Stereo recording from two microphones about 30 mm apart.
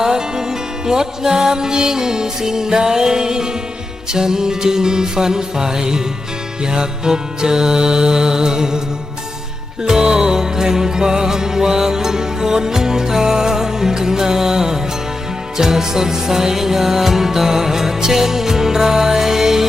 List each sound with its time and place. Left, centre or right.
0.0 s music: right
9.8 s music: right